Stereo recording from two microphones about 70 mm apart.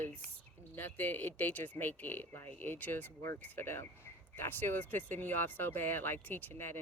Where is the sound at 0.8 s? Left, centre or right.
Left.